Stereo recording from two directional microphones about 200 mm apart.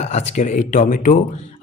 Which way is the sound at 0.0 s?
35° left (ahead or behind).